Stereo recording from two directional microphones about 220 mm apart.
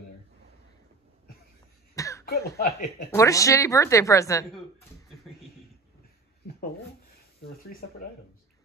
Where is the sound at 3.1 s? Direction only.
15° left (ahead or behind).